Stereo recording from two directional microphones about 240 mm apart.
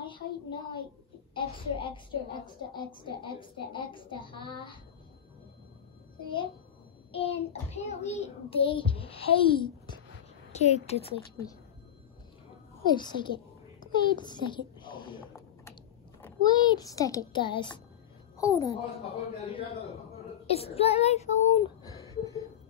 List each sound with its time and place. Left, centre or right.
0.0 s a sound: centre
2.4 s child singing: centre
7.1 s child singing: left
12.8 s a child's voice: centre
19.0 s child singing: left
22.2 s a sound: centre